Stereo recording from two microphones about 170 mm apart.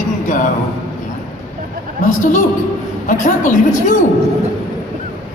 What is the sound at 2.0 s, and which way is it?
Speech, 50° left (ahead or behind).